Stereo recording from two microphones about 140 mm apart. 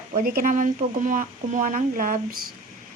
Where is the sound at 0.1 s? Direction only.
85° right.